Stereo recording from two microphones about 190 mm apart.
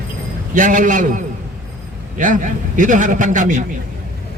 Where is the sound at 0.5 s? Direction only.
40° right (ahead or behind).